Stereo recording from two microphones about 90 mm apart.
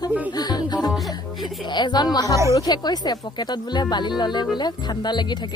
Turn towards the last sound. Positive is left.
turn(degrees=55)  # may be behind; listen again after turning